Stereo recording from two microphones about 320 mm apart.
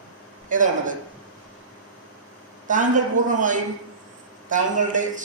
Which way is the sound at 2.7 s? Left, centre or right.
Right.